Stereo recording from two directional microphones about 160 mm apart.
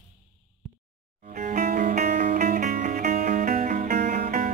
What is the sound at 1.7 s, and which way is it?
Music, 60° right (ahead or behind).